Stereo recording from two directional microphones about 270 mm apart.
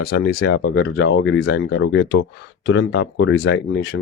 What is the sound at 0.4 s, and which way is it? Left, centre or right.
Speech, left.